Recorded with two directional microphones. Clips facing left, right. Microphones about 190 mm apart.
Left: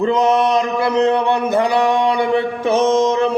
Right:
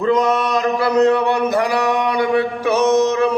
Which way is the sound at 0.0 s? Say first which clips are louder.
Left 2 dB; 25° left (ahead or behind).